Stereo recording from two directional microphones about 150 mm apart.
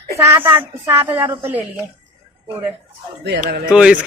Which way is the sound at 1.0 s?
15° right (ahead or behind).